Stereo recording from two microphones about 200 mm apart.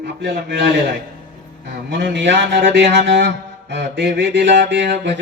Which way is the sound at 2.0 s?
65° right (ahead or behind).